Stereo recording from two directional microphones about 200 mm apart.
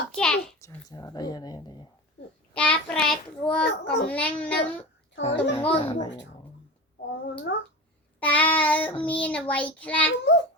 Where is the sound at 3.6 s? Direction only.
60° left (ahead or behind).